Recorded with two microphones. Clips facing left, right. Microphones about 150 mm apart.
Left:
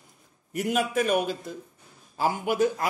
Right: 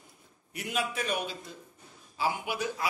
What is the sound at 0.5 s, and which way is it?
A man's voice, 45° left (ahead or behind).